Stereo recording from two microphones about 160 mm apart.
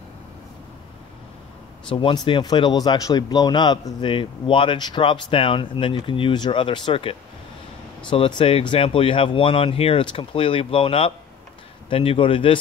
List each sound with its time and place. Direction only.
1.9 s speech: 30° left (ahead or behind)